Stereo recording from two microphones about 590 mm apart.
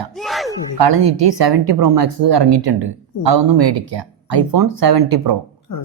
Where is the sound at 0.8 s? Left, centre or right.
Right.